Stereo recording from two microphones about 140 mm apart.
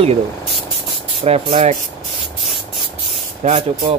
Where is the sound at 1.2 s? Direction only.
45° right (ahead or behind).